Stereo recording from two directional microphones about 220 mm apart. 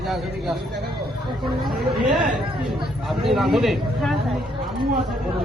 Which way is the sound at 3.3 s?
Centre (ahead or behind).